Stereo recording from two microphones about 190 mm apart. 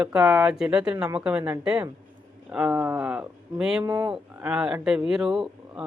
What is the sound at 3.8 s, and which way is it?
Speech, 20° right (ahead or behind).